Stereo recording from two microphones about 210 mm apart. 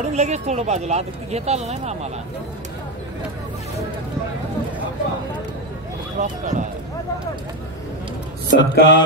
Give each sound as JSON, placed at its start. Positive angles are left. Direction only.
{"t": 0.0, "sound": "speech", "side_deg": -30}
{"t": 6.1, "sound": "speech", "side_deg": -35}
{"t": 8.5, "sound": "speech", "side_deg": 60}